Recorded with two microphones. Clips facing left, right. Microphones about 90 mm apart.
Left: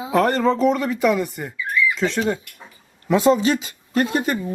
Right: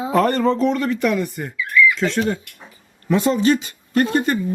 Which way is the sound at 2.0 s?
20° left (ahead or behind).